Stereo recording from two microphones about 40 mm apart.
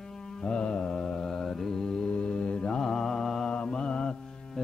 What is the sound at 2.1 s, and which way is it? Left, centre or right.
Mantra, left.